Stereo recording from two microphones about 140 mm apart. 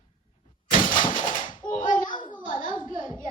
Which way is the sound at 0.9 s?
35° left (ahead or behind).